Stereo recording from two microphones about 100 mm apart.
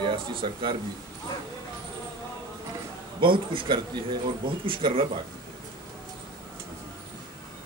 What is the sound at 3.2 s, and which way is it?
A man's voice, 60° right (ahead or behind).